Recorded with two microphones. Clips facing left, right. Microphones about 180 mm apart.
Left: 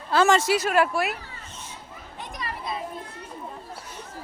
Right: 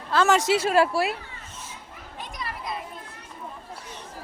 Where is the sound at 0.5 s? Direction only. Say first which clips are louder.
Right 1 dB; 30° right (ahead or behind).